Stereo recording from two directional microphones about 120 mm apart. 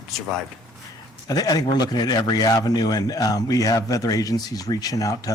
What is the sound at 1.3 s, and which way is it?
A man's voice, 30° left (ahead or behind).